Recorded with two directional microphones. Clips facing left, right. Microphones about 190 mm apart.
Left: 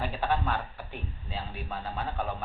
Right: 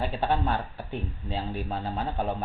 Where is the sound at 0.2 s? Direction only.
30° right (ahead or behind).